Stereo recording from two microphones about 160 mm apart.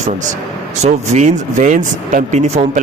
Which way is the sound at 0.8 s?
45° right (ahead or behind).